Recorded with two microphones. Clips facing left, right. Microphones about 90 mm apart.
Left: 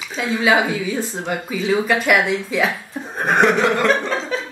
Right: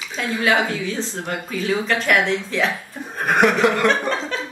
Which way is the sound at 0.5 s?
10° left (ahead or behind).